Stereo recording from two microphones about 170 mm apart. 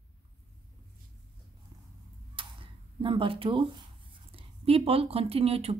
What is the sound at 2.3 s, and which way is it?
Speech, 30° right (ahead or behind).